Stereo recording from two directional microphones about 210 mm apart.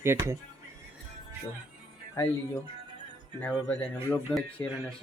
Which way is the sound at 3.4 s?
10° left (ahead or behind).